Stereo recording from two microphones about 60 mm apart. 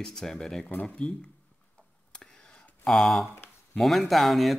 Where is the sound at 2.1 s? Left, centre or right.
Centre.